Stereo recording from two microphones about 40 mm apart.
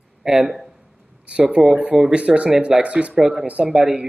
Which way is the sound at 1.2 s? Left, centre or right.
Right.